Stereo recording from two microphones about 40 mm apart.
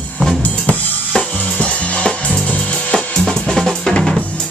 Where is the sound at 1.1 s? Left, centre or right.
Left.